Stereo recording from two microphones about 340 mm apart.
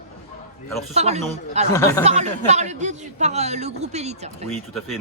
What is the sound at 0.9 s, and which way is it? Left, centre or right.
Speech, centre.